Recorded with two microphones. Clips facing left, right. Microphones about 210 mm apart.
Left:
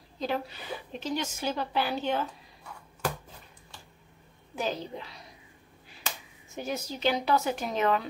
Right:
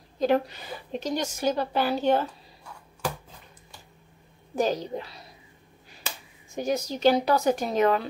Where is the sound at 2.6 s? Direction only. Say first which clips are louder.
Right 1 dB; 10° right (ahead or behind).